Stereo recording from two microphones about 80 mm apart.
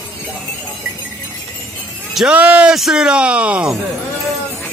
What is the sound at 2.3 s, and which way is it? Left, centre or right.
Speech, centre.